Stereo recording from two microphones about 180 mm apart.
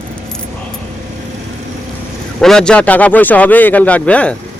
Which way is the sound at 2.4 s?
5° left (ahead or behind).